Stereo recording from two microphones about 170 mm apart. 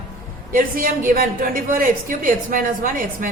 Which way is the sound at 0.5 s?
55° right (ahead or behind).